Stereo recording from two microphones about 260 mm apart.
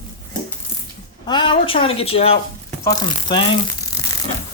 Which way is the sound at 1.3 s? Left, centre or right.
Centre.